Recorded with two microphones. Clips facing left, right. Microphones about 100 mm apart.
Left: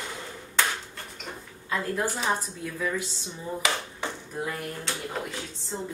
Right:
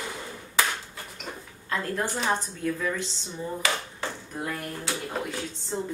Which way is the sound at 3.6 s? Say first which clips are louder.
Left 1 dB; 20° left (ahead or behind).